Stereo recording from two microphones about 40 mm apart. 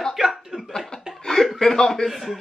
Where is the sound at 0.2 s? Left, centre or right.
Centre.